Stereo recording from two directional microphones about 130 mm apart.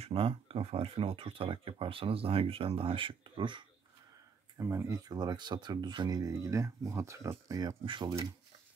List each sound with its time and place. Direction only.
0.0 s speech: 45° right (ahead or behind)
4.6 s speech: 20° right (ahead or behind)